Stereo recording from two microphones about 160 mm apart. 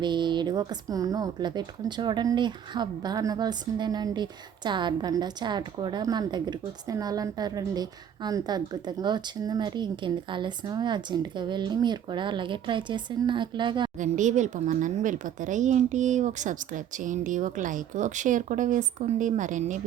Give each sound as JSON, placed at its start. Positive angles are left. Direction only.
{"t": 0.0, "sound": "speech", "side_deg": -30}
{"t": 14.0, "sound": "speech", "side_deg": -50}